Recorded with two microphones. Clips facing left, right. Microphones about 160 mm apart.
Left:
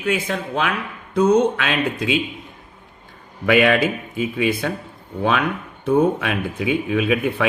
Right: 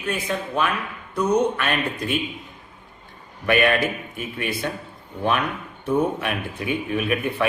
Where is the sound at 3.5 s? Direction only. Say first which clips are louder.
Left 4 dB; 90° left.